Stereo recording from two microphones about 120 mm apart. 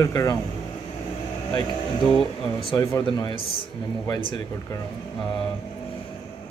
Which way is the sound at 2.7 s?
25° left (ahead or behind).